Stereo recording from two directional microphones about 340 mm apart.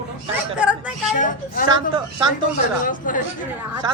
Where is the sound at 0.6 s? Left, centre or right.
Centre.